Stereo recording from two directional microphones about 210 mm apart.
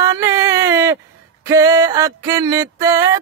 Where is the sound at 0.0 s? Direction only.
15° right (ahead or behind).